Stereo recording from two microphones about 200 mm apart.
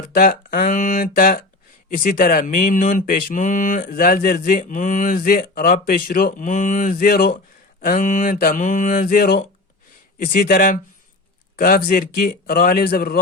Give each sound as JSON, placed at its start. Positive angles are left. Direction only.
{"t": 0.1, "sound": "speech", "side_deg": 45}
{"t": 7.8, "sound": "mantra", "side_deg": 45}
{"t": 10.2, "sound": "speech", "side_deg": 45}